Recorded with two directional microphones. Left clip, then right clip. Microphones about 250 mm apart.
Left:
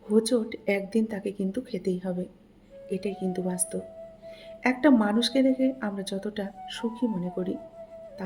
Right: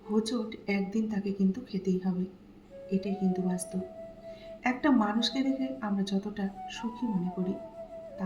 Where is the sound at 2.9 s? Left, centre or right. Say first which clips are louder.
Left 2 dB; left.